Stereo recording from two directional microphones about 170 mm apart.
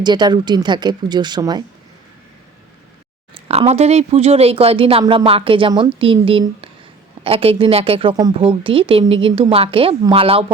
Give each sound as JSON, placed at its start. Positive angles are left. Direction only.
{"t": 0.0, "sound": "a woman's voice", "side_deg": -25}
{"t": 3.5, "sound": "a woman's voice", "side_deg": -40}